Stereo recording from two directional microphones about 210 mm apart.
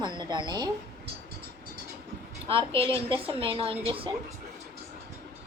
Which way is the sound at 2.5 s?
25° right (ahead or behind).